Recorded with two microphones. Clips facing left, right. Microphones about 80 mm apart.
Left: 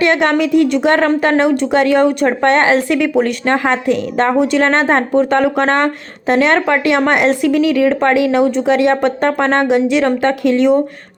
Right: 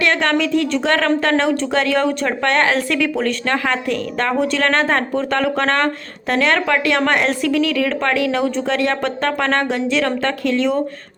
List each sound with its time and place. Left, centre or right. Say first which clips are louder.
0.0 s speech: left 4 dB; centre